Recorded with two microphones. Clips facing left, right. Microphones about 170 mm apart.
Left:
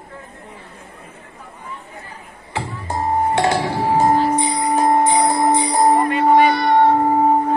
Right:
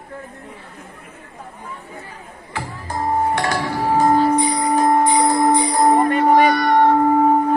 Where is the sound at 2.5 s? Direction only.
25° left (ahead or behind).